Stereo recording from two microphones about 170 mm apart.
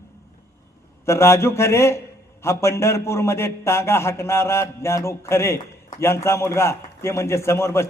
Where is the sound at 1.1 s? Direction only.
15° left (ahead or behind).